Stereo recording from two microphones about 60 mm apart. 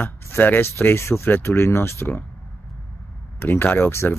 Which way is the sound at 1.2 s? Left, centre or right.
Left.